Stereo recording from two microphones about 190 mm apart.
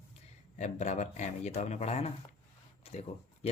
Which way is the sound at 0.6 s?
35° left (ahead or behind).